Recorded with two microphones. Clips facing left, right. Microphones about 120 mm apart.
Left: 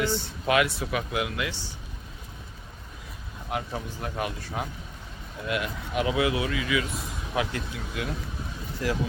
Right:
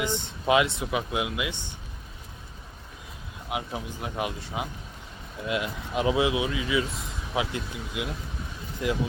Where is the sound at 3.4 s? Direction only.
10° right (ahead or behind).